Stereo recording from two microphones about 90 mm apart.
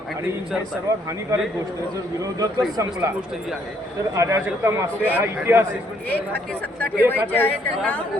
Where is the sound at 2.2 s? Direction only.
40° right (ahead or behind).